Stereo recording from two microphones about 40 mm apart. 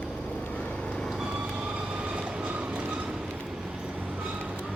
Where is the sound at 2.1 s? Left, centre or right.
Right.